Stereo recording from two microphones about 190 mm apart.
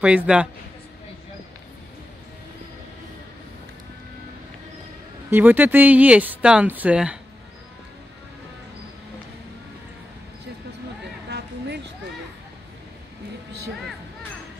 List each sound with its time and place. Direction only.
0.0 s a man's voice: 5° right (ahead or behind)
5.3 s speech: 10° right (ahead or behind)
11.2 s a sound: 60° right (ahead or behind)